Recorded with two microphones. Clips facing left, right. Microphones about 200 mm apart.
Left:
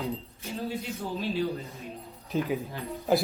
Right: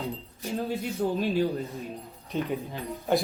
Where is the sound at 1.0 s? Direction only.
50° right (ahead or behind).